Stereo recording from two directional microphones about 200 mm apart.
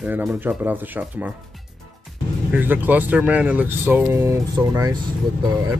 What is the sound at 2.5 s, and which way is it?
Speech, 10° right (ahead or behind).